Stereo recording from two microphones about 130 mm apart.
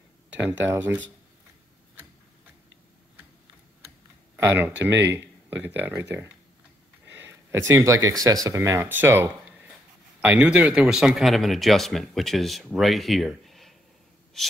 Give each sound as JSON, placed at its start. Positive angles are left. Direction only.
{"t": 0.5, "sound": "speech", "side_deg": -15}
{"t": 4.6, "sound": "speech", "side_deg": -15}